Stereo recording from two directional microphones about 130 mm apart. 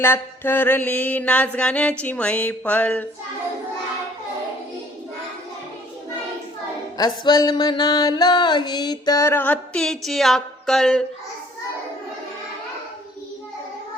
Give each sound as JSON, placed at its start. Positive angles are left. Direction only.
{"t": 0.0, "sound": "mantra", "side_deg": 15}
{"t": 6.9, "sound": "music", "side_deg": 30}